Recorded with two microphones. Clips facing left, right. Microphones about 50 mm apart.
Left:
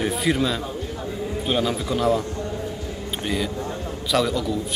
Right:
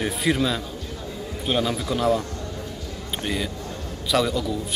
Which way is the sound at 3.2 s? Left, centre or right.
Centre.